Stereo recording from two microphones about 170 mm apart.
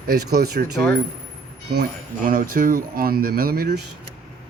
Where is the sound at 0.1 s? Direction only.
65° right (ahead or behind).